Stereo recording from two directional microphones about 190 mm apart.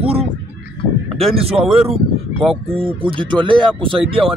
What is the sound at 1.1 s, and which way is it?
Speech, 30° right (ahead or behind).